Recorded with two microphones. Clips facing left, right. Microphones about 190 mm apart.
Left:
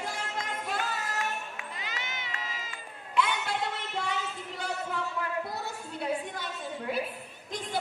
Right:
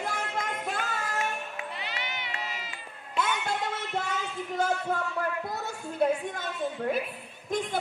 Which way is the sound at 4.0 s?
45° right (ahead or behind).